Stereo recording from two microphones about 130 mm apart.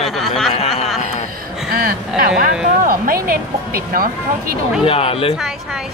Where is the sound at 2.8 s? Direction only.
90° right.